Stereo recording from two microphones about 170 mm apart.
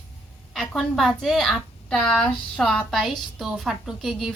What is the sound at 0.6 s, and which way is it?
A woman's voice, centre (ahead or behind).